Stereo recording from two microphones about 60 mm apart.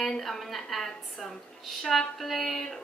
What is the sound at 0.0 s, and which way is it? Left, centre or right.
A woman's voice, centre.